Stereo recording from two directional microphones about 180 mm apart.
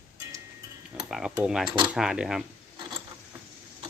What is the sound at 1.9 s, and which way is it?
Speech, 5° right (ahead or behind).